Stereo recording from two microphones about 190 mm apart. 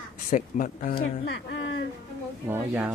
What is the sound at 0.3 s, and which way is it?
Speech, 45° left (ahead or behind).